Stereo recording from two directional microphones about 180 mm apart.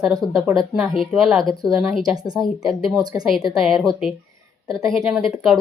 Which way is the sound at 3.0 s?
20° right (ahead or behind).